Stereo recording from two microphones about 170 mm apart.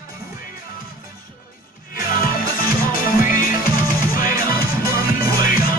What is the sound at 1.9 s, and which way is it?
Music, 55° left (ahead or behind).